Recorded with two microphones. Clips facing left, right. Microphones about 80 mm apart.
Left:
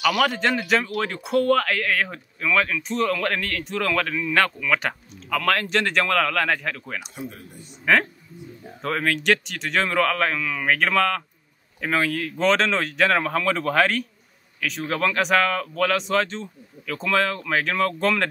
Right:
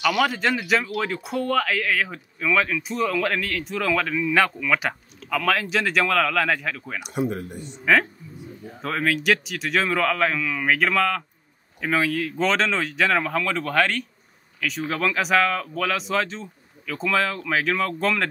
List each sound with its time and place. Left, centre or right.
0.0 s speech: centre
7.2 s speech: right
7.6 s speech: centre